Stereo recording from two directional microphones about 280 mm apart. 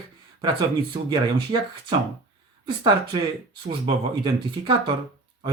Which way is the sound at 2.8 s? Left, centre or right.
Centre.